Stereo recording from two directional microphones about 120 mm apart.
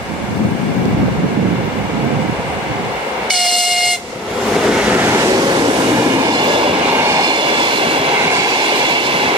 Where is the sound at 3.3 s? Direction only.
Centre (ahead or behind); by 6.8 s 45° right (ahead or behind).